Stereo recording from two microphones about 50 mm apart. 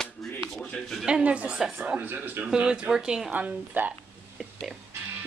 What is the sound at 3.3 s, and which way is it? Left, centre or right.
Speech, right.